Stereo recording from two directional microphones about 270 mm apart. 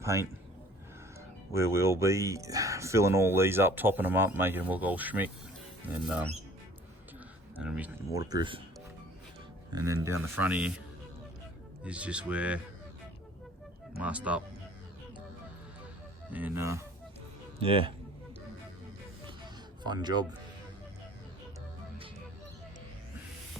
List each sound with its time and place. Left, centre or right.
0.0 s a man's voice: centre
1.5 s speech: centre
7.6 s speech: centre
9.7 s speech: centre
11.8 s speech: centre
14.0 s speech: centre
16.3 s speech: centre
17.6 s speech: centre
19.8 s speech: centre